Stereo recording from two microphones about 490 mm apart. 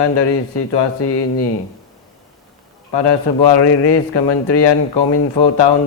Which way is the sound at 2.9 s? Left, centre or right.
Left.